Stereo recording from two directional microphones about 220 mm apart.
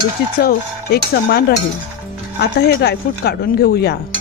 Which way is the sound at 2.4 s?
50° left (ahead or behind).